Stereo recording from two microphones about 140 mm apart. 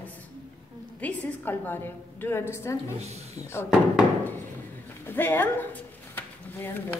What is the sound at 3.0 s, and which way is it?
Speech, 50° right (ahead or behind).